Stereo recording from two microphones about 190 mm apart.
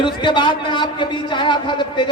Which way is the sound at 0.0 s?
25° left (ahead or behind).